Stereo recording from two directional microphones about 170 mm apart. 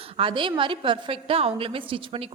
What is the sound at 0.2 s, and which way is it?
A woman's voice, 30° right (ahead or behind).